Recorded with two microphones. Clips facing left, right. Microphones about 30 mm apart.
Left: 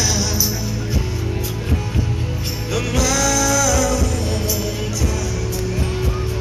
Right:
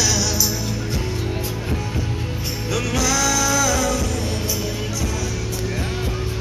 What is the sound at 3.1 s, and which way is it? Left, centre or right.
Music, centre.